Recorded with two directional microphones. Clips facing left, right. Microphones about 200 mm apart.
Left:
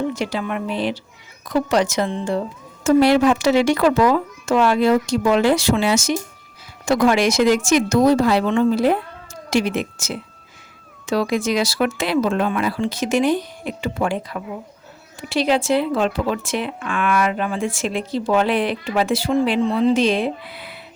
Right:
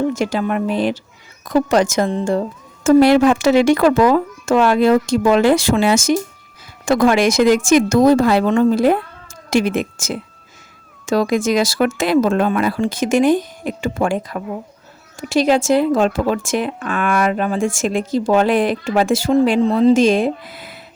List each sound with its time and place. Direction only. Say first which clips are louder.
0.1 s speech: right 5 dB; 45° right (ahead or behind)